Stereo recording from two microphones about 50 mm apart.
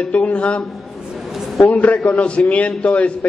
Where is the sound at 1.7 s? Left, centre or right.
Left.